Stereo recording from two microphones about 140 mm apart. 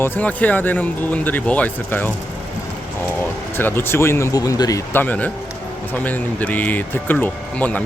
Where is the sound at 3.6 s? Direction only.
15° left (ahead or behind).